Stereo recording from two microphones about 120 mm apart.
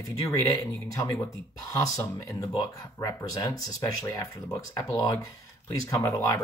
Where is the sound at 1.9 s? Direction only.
25° left (ahead or behind).